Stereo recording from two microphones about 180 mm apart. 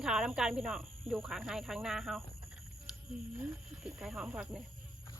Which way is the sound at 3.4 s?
Centre (ahead or behind).